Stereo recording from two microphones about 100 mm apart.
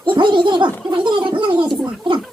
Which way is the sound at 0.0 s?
55° right (ahead or behind).